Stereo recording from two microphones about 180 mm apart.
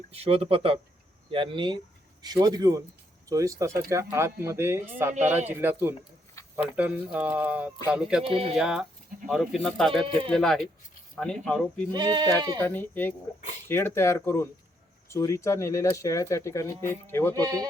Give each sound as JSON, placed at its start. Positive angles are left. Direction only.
{"t": 0.1, "sound": "speech", "side_deg": -35}
{"t": 8.3, "sound": "speech", "side_deg": -30}
{"t": 8.5, "sound": "speech", "side_deg": -5}
{"t": 11.9, "sound": "speech", "side_deg": -25}
{"t": 12.5, "sound": "speech", "side_deg": 10}
{"t": 17.3, "sound": "speech", "side_deg": -20}